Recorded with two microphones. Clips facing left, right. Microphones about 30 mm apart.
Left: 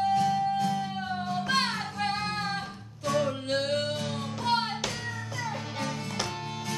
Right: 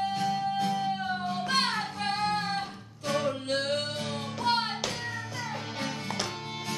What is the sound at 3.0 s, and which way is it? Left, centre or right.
Music, centre.